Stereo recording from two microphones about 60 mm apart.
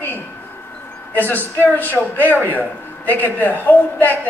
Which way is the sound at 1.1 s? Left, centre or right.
Left.